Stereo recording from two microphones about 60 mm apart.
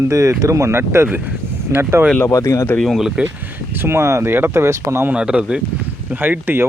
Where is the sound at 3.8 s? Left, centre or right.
Right.